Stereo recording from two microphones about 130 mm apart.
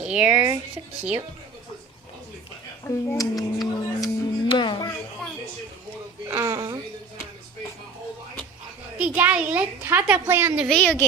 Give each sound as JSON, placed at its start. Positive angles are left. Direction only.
{"t": 0.0, "sound": "a woman's voice", "side_deg": -10}
{"t": 2.8, "sound": "speech", "side_deg": 25}
{"t": 4.4, "sound": "speech", "side_deg": 40}
{"t": 6.2, "sound": "a sound", "side_deg": -25}
{"t": 9.0, "sound": "a woman's voice", "side_deg": -10}
{"t": 10.7, "sound": "speech", "side_deg": 5}